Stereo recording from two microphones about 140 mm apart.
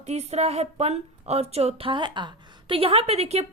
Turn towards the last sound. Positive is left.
turn(degrees=-50)  # may be behind; listen again after turning